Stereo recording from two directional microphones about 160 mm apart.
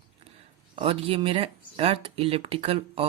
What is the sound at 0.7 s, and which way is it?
Speech, 35° right (ahead or behind).